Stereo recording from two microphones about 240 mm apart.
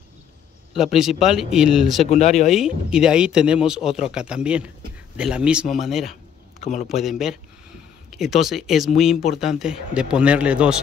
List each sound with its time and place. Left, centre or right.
0.9 s speech: centre
2.0 s speech: left
2.5 s speech: centre
6.6 s speech: left
6.9 s speech: centre